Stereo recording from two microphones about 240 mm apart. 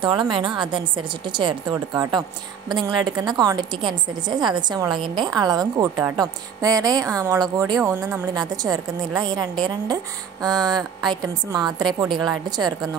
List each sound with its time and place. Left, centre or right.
0.0 s a woman's voice: centre